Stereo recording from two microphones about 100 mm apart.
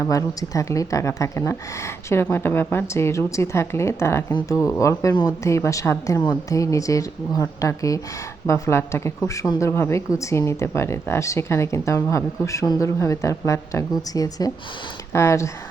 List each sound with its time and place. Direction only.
0.0 s speech: 35° left (ahead or behind)
15.1 s speech: 30° left (ahead or behind)